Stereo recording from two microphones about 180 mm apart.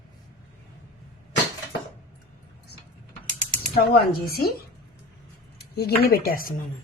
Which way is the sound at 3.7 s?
60° left (ahead or behind).